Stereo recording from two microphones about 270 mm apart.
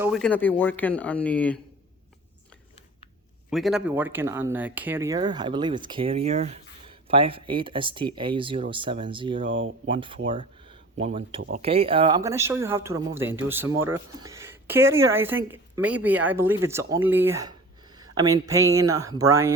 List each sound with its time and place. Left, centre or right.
0.0 s speech: centre
3.5 s speech: centre
9.5 s speech: right
9.8 s speech: centre
10.2 s a sound: centre
11.0 s speech: right